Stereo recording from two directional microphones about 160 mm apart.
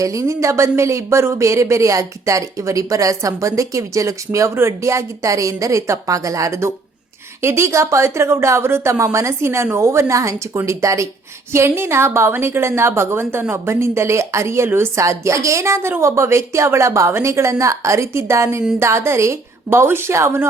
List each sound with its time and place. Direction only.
0.0 s a woman's voice: 20° right (ahead or behind)